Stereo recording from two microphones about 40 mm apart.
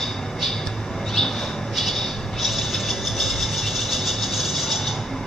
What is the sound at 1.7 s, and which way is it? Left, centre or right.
Vehicle, centre.